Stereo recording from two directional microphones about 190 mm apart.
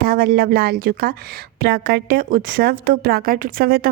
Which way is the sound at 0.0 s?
50° right (ahead or behind).